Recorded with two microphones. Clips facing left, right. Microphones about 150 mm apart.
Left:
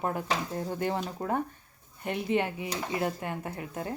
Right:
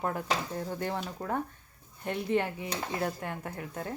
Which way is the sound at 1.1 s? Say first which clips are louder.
Left 3 dB; 20° left (ahead or behind).